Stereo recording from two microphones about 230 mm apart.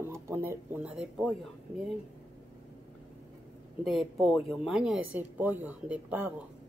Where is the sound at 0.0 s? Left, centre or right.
Centre.